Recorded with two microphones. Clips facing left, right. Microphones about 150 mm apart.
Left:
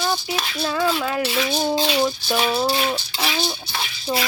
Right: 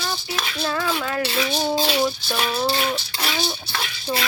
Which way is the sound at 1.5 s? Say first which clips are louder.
Left 1 dB; centre (ahead or behind).